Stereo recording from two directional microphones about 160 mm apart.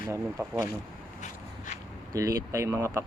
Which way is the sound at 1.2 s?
50° left (ahead or behind).